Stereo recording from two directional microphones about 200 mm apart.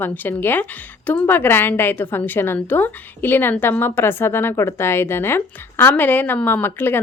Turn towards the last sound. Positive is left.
turn(degrees=10)  # may be behind; listen again after turning